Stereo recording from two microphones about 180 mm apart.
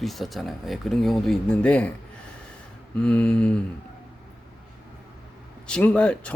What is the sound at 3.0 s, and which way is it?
Speech, 5° left (ahead or behind).